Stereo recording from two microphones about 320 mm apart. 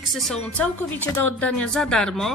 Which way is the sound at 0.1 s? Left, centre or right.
Centre.